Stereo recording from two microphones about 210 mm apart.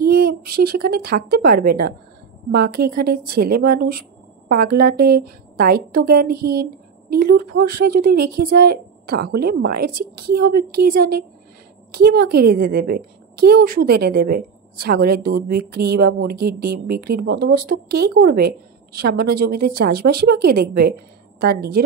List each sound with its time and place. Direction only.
0.0 s a woman's voice: 45° right (ahead or behind)